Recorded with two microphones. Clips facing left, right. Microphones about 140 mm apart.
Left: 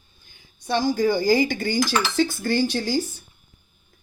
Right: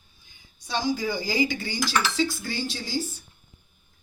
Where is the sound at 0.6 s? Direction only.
55° left (ahead or behind).